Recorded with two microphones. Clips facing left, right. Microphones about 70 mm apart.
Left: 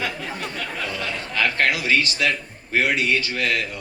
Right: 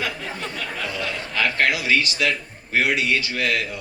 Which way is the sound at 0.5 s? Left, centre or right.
Left.